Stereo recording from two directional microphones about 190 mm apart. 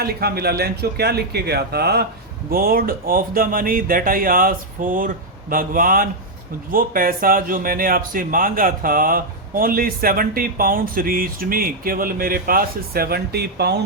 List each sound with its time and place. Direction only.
0.0 s speech: 55° right (ahead or behind)